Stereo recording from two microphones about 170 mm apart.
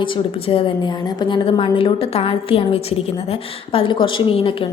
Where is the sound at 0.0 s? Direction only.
30° left (ahead or behind).